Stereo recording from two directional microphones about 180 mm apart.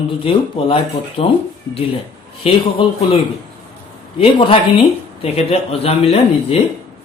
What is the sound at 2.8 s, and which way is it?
Speech, 30° left (ahead or behind).